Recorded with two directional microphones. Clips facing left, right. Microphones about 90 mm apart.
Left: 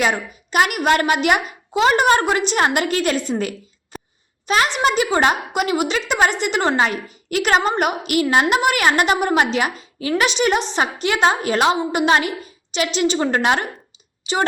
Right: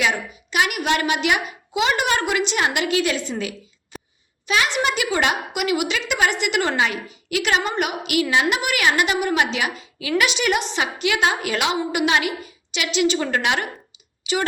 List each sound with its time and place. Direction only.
0.0 s a child's voice: 45° left (ahead or behind)
3.9 s a sound: 40° left (ahead or behind)
4.4 s a woman's voice: 40° left (ahead or behind)